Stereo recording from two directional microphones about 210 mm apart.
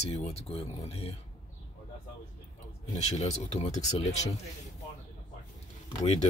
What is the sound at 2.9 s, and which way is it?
Speech, 30° left (ahead or behind).